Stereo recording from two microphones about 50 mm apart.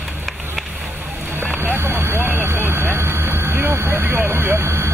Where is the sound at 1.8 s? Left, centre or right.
Right.